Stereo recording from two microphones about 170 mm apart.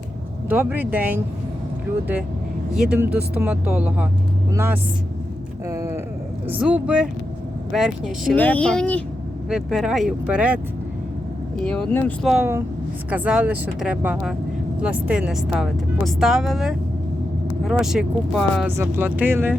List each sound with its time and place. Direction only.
0.4 s speech: 10° right (ahead or behind)
2.7 s speech: 5° right (ahead or behind)
5.6 s a sound: 15° right (ahead or behind)
6.5 s speech: 10° right (ahead or behind)
8.4 s speech: 10° left (ahead or behind); by 10.6 s 10° right (ahead or behind)
11.6 s speech: 5° left (ahead or behind)
12.3 s speech: 10° right (ahead or behind)
18.8 s speech: 10° right (ahead or behind)